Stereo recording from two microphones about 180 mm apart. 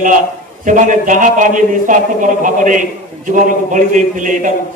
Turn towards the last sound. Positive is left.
turn(degrees=-45)  # may be behind; listen again after turning